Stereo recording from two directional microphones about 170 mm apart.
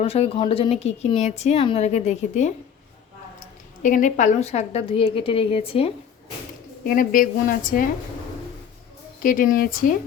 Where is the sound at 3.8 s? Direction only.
50° left (ahead or behind).